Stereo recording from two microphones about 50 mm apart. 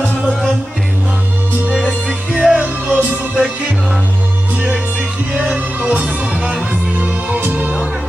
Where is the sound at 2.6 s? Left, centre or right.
Right.